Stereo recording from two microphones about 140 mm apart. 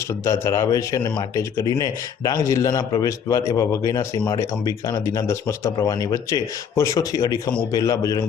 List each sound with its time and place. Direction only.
0.3 s speech: 20° left (ahead or behind)